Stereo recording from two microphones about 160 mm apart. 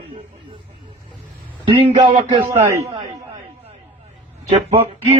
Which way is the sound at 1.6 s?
30° right (ahead or behind).